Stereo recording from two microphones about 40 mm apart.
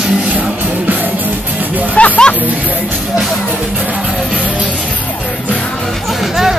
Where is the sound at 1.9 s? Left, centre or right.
Left.